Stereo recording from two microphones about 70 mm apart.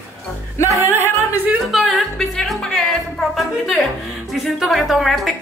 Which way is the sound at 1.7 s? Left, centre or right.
Centre.